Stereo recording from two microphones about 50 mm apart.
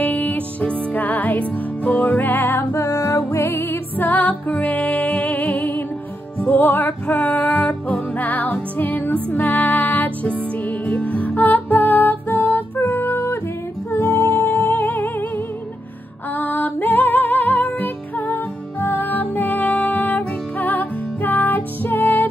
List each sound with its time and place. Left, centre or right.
0.0 s music: left
2.7 s music: left
4.0 s music: left
5.5 s music: left
10.6 s music: left